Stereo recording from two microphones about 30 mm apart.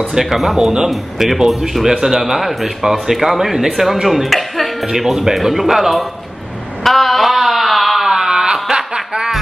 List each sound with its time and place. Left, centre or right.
0.2 s speech: centre
0.6 s speech: right
0.8 s speech: centre
2.0 s speech: centre
2.3 s speech: centre
4.3 s music: centre
4.8 s speech: centre
6.8 s a sound: centre
8.0 s a sound: centre
8.6 s snicker: right